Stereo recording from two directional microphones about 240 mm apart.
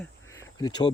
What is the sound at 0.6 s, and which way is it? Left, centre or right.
Speech, centre.